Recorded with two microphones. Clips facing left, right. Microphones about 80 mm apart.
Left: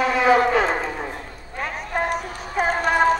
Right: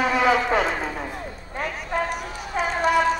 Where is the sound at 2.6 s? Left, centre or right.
Left.